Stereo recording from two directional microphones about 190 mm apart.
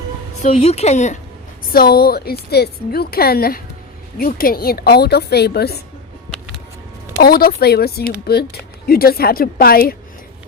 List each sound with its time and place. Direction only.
0.4 s a woman's voice: 35° left (ahead or behind)
1.7 s a woman's voice: 55° left (ahead or behind)
7.2 s a woman's voice: 55° left (ahead or behind)